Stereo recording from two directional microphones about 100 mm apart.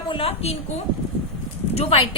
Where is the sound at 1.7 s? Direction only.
90° left.